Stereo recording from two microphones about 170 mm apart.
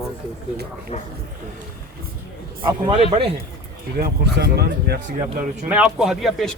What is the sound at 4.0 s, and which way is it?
Speech, 70° right (ahead or behind).